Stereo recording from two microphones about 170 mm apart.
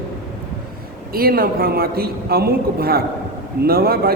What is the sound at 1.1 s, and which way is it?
A man's voice, 60° right (ahead or behind).